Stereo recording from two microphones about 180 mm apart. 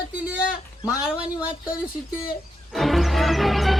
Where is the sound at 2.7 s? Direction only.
Centre (ahead or behind).